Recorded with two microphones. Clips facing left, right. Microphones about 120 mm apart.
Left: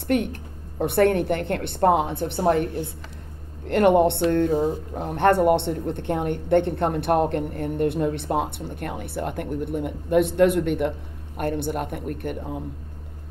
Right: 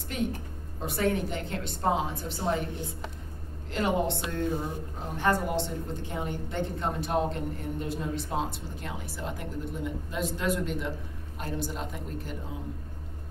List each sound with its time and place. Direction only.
0.1 s speech: 65° left (ahead or behind)